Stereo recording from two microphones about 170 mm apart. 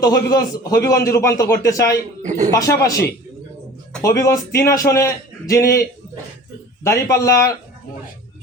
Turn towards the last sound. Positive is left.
turn(degrees=15)  # may be behind; listen again after turning